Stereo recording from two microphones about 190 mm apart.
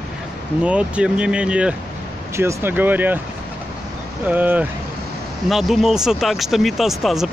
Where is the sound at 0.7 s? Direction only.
5° right (ahead or behind).